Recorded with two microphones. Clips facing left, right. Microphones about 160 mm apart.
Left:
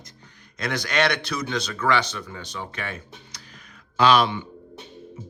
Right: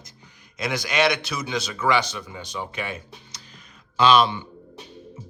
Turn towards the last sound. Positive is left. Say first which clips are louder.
# right 1 dB
turn(degrees=-25)  # may be behind; listen again after turning